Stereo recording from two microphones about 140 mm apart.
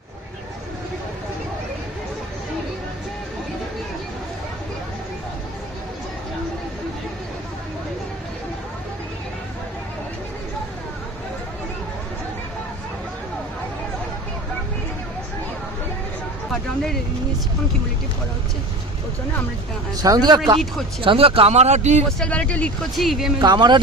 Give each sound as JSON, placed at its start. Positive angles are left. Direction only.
{"t": 16.5, "sound": "speech", "side_deg": 5}
{"t": 20.0, "sound": "speech", "side_deg": -30}
{"t": 21.0, "sound": "speech", "side_deg": -40}
{"t": 22.2, "sound": "speech", "side_deg": 10}
{"t": 23.4, "sound": "speech", "side_deg": -30}